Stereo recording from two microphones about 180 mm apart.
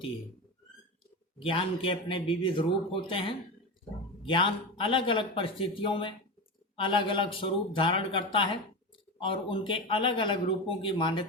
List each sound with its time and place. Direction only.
1.4 s speech: 30° left (ahead or behind)